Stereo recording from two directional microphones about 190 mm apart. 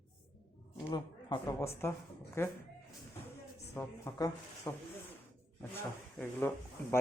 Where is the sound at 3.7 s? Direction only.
15° left (ahead or behind).